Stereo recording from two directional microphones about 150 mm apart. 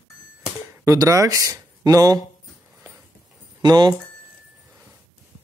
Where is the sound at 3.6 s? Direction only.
30° right (ahead or behind).